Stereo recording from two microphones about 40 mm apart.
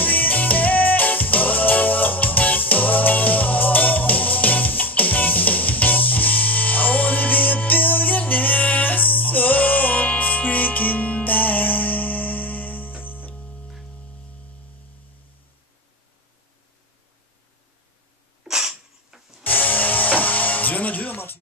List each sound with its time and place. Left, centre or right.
0.0 s music: left
18.4 s a sound: centre
19.4 s music: left